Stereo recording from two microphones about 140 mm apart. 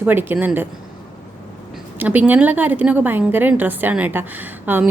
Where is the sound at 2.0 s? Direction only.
10° right (ahead or behind).